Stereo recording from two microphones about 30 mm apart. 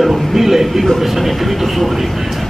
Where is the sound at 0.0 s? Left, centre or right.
Centre.